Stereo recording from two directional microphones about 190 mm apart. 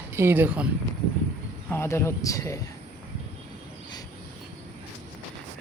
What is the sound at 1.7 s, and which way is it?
Speech, 15° left (ahead or behind).